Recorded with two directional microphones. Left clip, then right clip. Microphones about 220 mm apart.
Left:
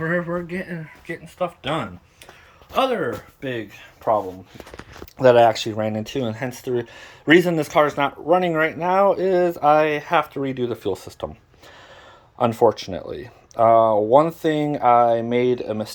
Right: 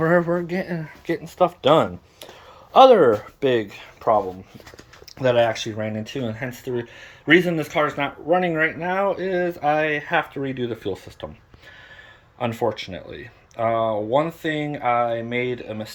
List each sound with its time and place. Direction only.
0.0 s speech: 15° right (ahead or behind)
4.0 s speech: 5° right (ahead or behind)
5.2 s speech: 25° left (ahead or behind)
12.4 s speech: 30° left (ahead or behind)